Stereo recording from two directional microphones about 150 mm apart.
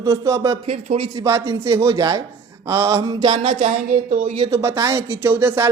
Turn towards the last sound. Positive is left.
turn(degrees=-15)  # may be behind; listen again after turning